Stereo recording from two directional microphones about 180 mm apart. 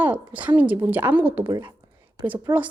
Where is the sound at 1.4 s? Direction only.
25° right (ahead or behind).